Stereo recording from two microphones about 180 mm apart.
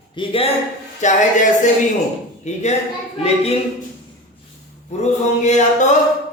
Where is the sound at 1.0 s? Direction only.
40° left (ahead or behind).